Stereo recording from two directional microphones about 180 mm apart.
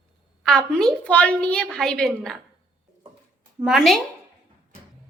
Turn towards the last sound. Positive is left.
turn(degrees=0)  # may be behind; listen again after turning